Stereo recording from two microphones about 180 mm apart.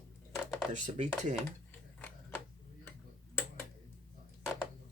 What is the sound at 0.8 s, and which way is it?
Speech, 40° right (ahead or behind).